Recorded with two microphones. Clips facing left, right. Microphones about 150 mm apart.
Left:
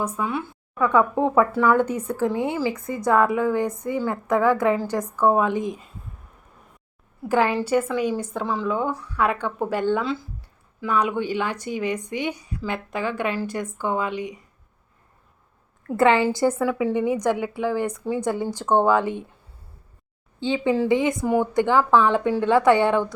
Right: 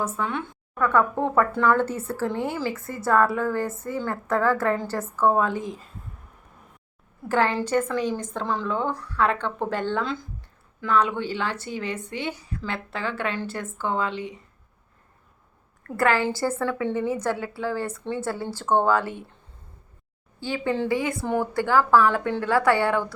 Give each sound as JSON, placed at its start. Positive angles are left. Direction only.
{"t": 0.0, "sound": "a woman's voice", "side_deg": 10}
{"t": 7.3, "sound": "a woman's voice", "side_deg": 10}
{"t": 16.0, "sound": "a woman's voice", "side_deg": 20}
{"t": 20.4, "sound": "a woman's voice", "side_deg": 20}